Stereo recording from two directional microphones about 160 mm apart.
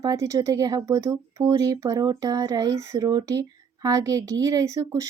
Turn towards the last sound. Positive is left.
turn(degrees=-20)  # may be behind; listen again after turning